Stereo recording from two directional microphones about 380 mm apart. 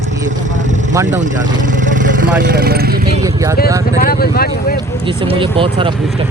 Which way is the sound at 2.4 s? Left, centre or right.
Right.